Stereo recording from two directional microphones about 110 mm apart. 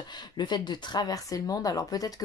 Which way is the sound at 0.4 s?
45° left (ahead or behind).